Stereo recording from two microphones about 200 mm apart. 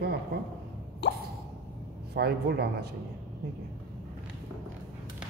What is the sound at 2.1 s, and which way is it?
Speech, 55° right (ahead or behind).